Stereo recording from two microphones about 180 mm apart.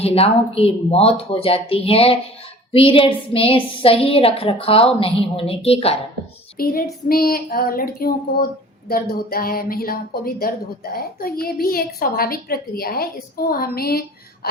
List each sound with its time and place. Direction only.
0.0 s a woman's voice: 35° left (ahead or behind)
6.6 s a woman's voice: 55° left (ahead or behind)